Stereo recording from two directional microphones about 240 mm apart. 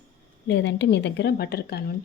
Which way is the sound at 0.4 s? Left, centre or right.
Left.